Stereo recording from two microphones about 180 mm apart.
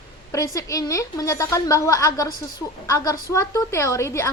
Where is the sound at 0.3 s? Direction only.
20° left (ahead or behind).